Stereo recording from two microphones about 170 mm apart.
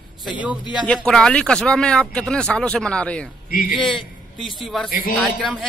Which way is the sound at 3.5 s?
60° left (ahead or behind).